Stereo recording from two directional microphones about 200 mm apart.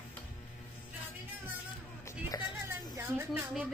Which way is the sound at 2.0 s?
20° left (ahead or behind).